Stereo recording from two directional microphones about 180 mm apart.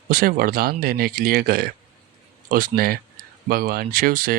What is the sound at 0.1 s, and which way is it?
Speech, 55° right (ahead or behind).